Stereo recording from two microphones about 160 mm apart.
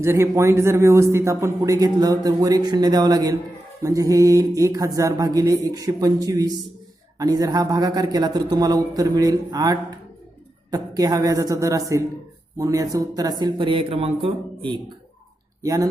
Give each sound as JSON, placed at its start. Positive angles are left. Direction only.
{"t": 0.0, "sound": "a man's voice", "side_deg": -15}
{"t": 15.6, "sound": "a man's voice", "side_deg": -20}